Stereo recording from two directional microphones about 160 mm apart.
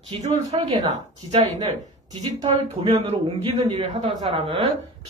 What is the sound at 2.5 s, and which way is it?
A woman's voice, 35° right (ahead or behind).